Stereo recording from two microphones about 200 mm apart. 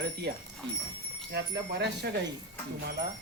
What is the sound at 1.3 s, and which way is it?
Speech, 60° right (ahead or behind).